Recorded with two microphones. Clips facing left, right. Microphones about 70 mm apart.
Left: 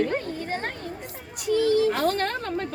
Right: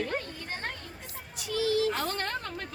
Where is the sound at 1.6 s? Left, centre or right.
Left.